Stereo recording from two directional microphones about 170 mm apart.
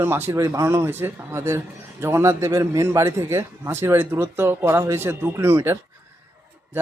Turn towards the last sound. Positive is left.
turn(degrees=-15)  # may be behind; listen again after turning